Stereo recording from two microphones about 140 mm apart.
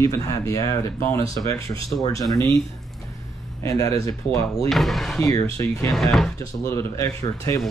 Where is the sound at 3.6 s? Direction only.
25° left (ahead or behind).